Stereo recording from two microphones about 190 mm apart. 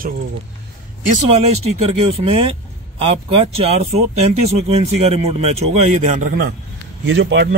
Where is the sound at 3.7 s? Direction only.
35° right (ahead or behind); by 6.5 s 50° right (ahead or behind).